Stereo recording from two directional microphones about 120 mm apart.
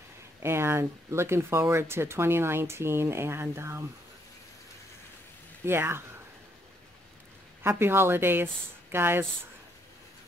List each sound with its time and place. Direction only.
0.4 s speech: 20° right (ahead or behind)
5.7 s speech: 20° right (ahead or behind)
7.6 s speech: 20° right (ahead or behind)